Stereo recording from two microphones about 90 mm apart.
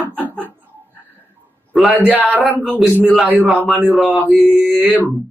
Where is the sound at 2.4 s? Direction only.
Centre (ahead or behind).